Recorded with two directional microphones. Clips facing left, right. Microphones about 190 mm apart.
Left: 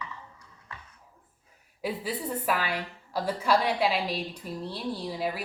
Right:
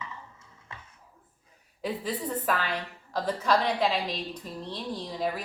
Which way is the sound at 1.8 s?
10° left (ahead or behind).